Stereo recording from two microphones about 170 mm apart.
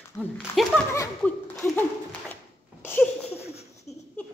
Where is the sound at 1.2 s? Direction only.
10° left (ahead or behind).